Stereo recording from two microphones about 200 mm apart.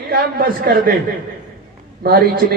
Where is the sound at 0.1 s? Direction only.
50° right (ahead or behind).